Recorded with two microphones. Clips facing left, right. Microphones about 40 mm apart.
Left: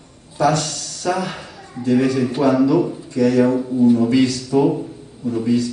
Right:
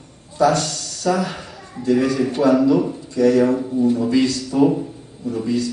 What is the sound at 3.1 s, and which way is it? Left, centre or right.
Speech, left.